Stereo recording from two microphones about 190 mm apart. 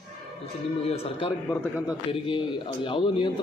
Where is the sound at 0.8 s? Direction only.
30° left (ahead or behind).